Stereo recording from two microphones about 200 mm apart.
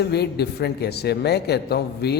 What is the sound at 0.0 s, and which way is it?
A man's voice, 55° left (ahead or behind).